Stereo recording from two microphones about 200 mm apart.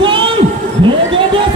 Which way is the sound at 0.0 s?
25° right (ahead or behind).